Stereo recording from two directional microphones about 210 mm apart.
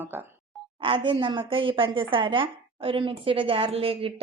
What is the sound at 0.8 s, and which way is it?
A woman's voice, 25° right (ahead or behind).